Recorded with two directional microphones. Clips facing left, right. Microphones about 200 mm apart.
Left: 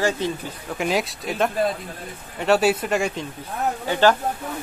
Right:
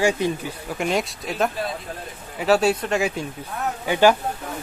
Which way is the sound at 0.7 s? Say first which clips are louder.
Left 1 dB; centre (ahead or behind).